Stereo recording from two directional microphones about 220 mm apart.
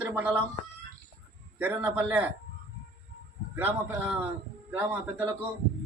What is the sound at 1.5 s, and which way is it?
Speech, 5° right (ahead or behind).